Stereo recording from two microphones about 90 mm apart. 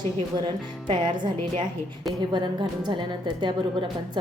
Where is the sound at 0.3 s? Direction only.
60° right (ahead or behind).